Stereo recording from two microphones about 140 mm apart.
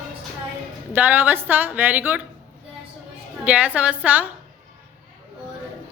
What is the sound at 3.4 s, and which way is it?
Speech, 10° right (ahead or behind).